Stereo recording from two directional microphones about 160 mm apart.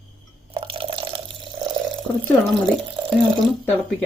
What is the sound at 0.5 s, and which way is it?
Drip, 35° right (ahead or behind).